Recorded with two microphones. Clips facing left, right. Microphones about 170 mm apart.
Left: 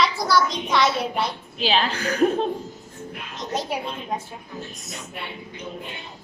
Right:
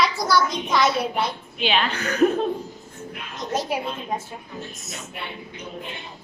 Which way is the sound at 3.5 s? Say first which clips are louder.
Right 2 dB; centre (ahead or behind).